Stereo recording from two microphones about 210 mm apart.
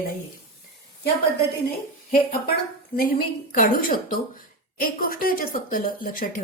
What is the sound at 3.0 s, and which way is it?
A woman's voice, 45° left (ahead or behind).